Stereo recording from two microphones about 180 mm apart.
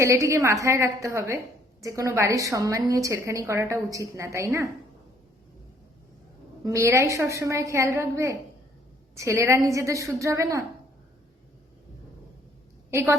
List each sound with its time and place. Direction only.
0.0 s a woman's voice: 15° right (ahead or behind)
6.7 s a woman's voice: 15° right (ahead or behind)
12.9 s a woman's voice: 15° right (ahead or behind)